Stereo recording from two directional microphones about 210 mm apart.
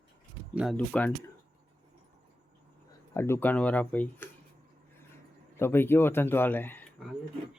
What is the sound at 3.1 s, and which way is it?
Speech, 10° left (ahead or behind).